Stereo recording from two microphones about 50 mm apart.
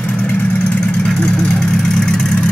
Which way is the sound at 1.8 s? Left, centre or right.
Centre.